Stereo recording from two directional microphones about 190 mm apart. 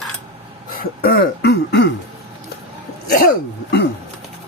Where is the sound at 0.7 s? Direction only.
50° left (ahead or behind).